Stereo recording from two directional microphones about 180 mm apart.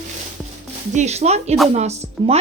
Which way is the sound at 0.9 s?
40° right (ahead or behind).